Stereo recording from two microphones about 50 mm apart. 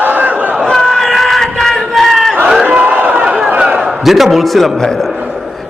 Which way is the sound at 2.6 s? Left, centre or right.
Right.